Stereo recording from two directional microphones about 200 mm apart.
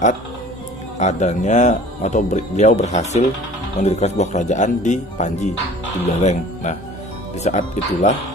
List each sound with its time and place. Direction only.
0.9 s speech: 35° left (ahead or behind)